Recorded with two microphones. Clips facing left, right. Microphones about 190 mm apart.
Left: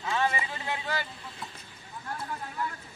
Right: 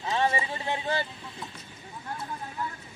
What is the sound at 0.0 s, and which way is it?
Speech, 30° right (ahead or behind).